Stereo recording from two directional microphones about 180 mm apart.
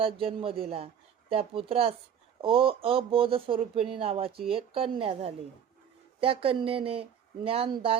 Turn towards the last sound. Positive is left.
turn(degrees=-30)  # may be behind; listen again after turning